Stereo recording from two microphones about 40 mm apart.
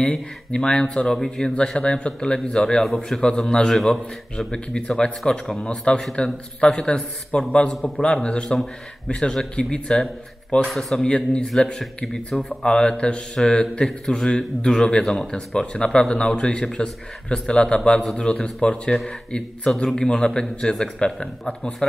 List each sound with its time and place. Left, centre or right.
0.1 s a man's voice: centre
1.5 s a man's voice: left
3.7 s a man's voice: centre
4.5 s a man's voice: centre
10.7 s a man's voice: centre
11.1 s a man's voice: left